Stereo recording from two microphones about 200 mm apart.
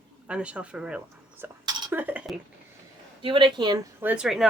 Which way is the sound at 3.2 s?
25° right (ahead or behind).